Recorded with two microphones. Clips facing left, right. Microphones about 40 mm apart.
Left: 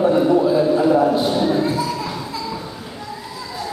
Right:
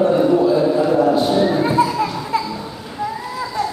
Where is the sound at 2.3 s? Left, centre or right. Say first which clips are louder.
Right 11 dB; right.